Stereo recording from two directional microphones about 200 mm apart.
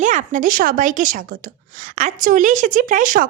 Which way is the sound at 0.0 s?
40° right (ahead or behind).